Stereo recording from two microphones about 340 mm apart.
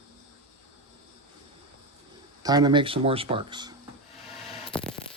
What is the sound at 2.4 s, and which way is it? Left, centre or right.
Speech, centre.